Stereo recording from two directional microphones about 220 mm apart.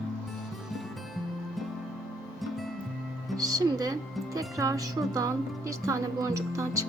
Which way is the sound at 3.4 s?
15° right (ahead or behind).